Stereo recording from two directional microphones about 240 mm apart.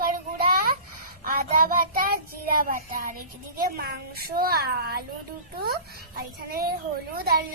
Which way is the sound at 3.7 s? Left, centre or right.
Right.